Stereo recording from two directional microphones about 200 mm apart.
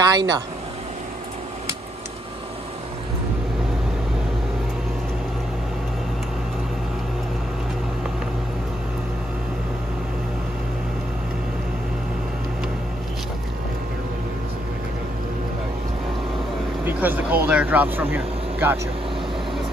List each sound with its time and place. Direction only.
0.0 s speech: 20° right (ahead or behind)
16.8 s speech: 10° right (ahead or behind)